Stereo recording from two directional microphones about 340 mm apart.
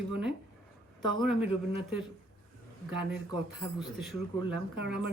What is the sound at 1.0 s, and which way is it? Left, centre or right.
Speech, centre.